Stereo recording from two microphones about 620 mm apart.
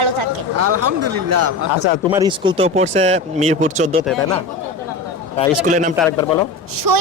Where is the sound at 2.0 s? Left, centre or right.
Centre.